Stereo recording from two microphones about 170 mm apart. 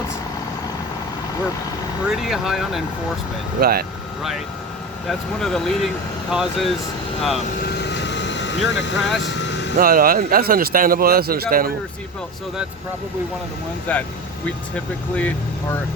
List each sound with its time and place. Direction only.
2.0 s speech: centre (ahead or behind)
3.6 s a man's voice: 60° right (ahead or behind)
5.0 s speech: centre (ahead or behind)
7.6 s vehicle: 85° left
9.0 s speech: centre (ahead or behind)
9.2 s vehicle: 90° left
9.7 s a man's voice: 55° right (ahead or behind)
13.9 s speech: 10° left (ahead or behind)